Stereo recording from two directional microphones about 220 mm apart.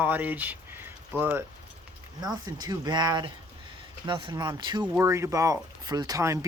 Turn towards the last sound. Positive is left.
turn(degrees=-15)  # may be behind; listen again after turning